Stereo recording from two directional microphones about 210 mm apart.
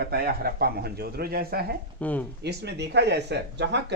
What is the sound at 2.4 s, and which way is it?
Speech, 50° right (ahead or behind).